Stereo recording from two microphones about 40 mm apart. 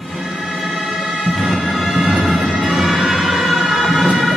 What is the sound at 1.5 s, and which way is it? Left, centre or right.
Emergency vehicle, centre.